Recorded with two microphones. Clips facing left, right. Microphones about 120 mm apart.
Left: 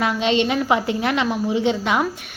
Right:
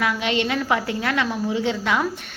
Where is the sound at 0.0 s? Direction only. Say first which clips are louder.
Left 3 dB; 25° left (ahead or behind).